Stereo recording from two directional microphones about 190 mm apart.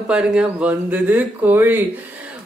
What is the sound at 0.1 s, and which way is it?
A woman's voice, 5° right (ahead or behind).